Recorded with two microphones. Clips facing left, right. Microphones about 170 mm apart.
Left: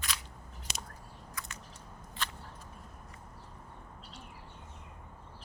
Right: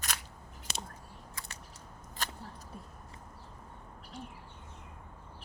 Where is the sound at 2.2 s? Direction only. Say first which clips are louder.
Even; 40° right (ahead or behind).